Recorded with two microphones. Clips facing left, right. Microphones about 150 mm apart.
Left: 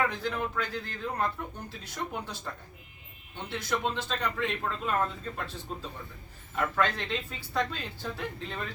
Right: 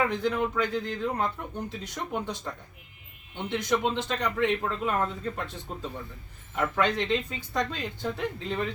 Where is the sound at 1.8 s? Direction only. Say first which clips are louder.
Even; 20° right (ahead or behind).